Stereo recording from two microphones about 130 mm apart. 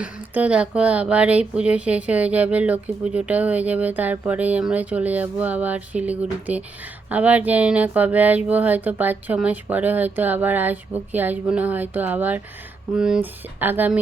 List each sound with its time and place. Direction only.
0.0 s speech: 10° right (ahead or behind)